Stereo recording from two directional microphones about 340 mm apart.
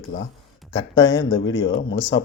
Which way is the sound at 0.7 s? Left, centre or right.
Centre.